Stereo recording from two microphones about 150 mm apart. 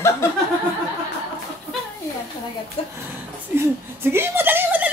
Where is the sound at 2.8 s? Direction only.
45° left (ahead or behind).